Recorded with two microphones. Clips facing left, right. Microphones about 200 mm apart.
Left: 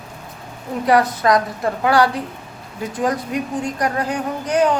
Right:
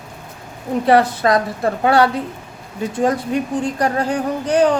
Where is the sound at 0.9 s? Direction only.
30° right (ahead or behind).